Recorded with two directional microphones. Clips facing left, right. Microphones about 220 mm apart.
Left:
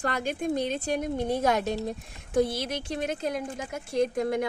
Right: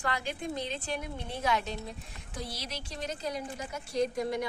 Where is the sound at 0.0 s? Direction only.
45° left (ahead or behind).